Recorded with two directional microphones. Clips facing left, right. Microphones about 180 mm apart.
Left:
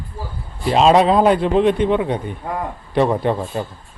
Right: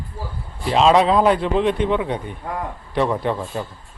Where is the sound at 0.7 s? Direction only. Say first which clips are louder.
Left 2 dB; 45° left (ahead or behind).